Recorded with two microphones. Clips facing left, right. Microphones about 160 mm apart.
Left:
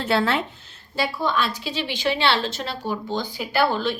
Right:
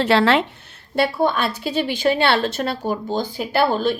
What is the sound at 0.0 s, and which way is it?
Speech, 90° right.